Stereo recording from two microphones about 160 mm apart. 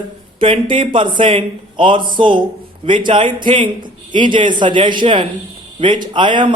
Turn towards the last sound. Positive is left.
turn(degrees=-30)  # may be behind; listen again after turning